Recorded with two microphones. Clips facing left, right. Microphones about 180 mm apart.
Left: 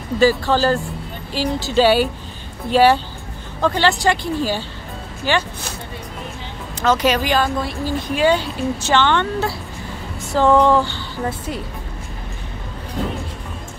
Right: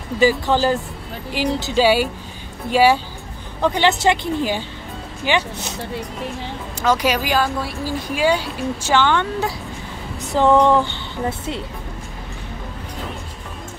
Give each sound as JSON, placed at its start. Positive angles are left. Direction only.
{"t": 0.2, "sound": "speech", "side_deg": -15}
{"t": 6.8, "sound": "speech", "side_deg": -10}